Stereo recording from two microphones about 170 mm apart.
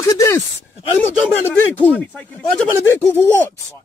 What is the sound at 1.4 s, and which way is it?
Speech, 10° left (ahead or behind).